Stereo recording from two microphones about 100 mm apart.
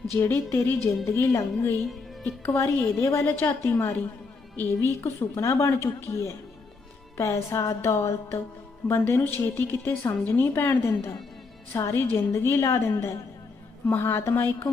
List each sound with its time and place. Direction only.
0.1 s a woman's voice: 25° left (ahead or behind)